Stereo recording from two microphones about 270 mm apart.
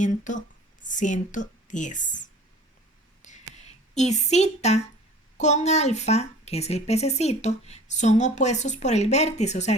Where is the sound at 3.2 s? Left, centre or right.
Left.